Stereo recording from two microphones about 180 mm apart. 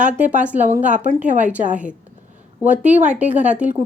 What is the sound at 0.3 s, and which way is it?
A woman's voice, 10° right (ahead or behind).